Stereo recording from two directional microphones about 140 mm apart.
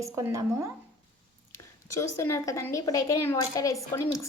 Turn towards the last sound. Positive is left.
turn(degrees=20)  # may be behind; listen again after turning